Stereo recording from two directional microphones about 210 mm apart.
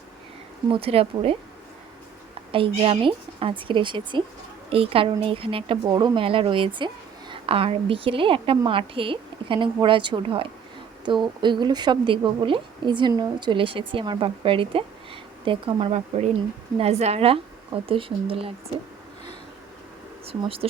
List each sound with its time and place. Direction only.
0.7 s speech: 25° right (ahead or behind)
2.5 s speech: 25° right (ahead or behind)
20.2 s speech: 25° right (ahead or behind)